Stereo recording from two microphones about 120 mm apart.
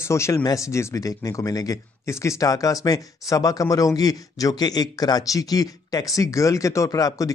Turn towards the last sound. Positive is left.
turn(degrees=30)  # may be behind; listen again after turning